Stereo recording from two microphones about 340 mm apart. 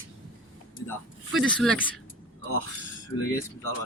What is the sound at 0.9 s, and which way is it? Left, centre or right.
Speech, centre.